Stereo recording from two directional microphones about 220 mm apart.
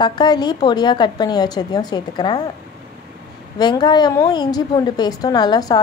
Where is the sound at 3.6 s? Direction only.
20° left (ahead or behind).